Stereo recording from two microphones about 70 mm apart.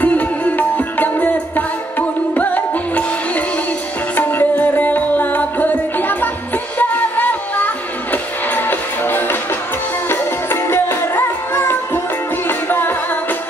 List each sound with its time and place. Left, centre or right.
0.0 s music: left